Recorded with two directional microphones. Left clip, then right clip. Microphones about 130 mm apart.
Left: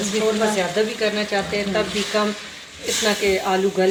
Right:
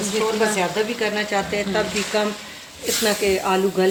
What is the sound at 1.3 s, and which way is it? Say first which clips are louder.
Speech: even; 80° right.